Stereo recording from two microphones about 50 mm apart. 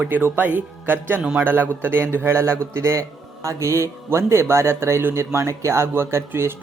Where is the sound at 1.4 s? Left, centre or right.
Right.